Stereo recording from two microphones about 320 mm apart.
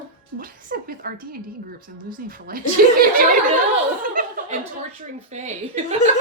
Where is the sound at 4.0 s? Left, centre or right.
Right.